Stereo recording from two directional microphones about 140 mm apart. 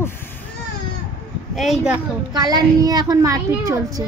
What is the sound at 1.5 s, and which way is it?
Child singing, centre (ahead or behind).